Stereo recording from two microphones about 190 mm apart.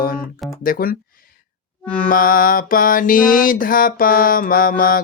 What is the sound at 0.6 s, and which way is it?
Mantra, 50° left (ahead or behind).